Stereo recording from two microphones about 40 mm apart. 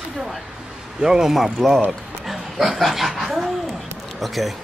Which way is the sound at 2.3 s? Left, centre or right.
Centre.